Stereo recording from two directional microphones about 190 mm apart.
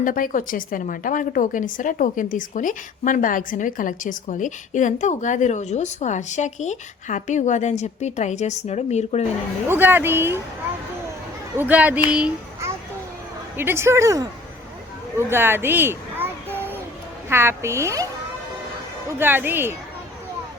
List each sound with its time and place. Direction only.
0.0 s a woman's voice: 45° left (ahead or behind)
9.6 s a woman's voice: 10° right (ahead or behind)
11.5 s a woman's voice: 10° right (ahead or behind)
15.3 s a sound: 10° right (ahead or behind)
17.2 s a woman's voice: 10° right (ahead or behind)